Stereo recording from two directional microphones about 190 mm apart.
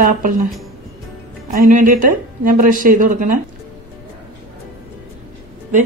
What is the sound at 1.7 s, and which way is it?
Speech, 45° right (ahead or behind).